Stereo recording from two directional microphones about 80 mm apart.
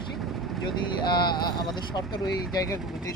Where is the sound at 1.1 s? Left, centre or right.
Left.